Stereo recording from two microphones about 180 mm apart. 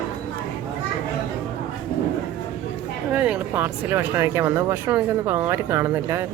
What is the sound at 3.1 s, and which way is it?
Speech, 10° right (ahead or behind).